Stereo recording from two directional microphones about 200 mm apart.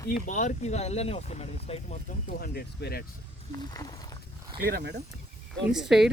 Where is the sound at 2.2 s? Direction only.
50° left (ahead or behind).